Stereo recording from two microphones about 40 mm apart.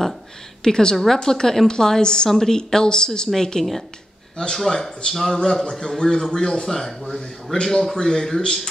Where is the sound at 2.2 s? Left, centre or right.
Centre.